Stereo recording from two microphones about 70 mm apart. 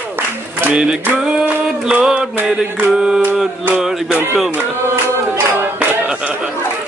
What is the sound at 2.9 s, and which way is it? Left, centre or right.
Music, centre.